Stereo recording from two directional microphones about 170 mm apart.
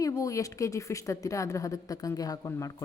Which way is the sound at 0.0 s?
20° left (ahead or behind).